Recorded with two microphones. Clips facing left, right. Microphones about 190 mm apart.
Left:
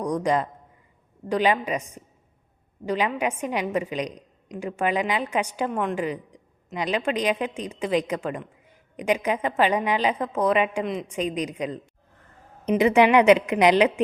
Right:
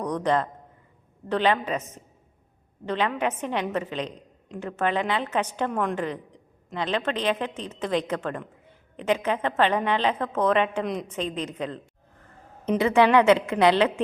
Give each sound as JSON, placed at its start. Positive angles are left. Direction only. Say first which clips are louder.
{"t": 0.0, "sound": "a woman's voice", "louder": "left 1 dB", "side_deg": 10}